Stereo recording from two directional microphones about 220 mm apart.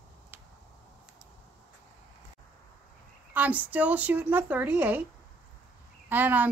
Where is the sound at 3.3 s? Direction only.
5° right (ahead or behind).